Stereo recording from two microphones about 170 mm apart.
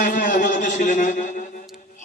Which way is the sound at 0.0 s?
50° left (ahead or behind).